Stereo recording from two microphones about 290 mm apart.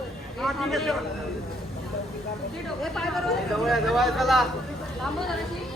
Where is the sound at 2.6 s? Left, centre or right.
Centre.